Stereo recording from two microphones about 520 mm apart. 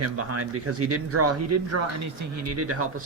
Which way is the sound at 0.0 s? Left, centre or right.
Right.